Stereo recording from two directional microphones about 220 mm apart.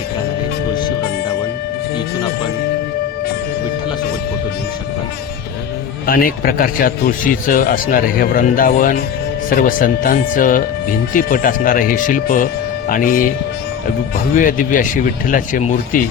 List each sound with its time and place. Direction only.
6.1 s speech: 40° left (ahead or behind)
14.3 s speech: 40° left (ahead or behind)